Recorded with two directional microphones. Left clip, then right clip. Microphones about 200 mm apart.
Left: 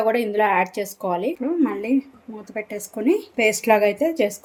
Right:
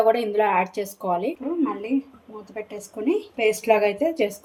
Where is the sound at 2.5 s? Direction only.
55° left (ahead or behind); by 4.3 s 35° left (ahead or behind).